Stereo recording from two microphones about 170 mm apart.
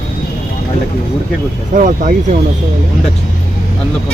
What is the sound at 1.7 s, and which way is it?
Speech, 50° right (ahead or behind).